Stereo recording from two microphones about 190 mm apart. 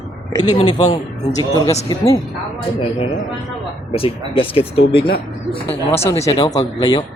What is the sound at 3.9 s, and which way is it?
Speech, 30° left (ahead or behind).